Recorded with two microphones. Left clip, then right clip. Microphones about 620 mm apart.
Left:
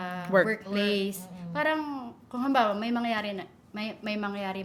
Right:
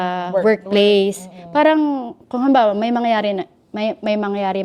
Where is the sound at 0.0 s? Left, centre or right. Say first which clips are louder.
Right 13 dB; right.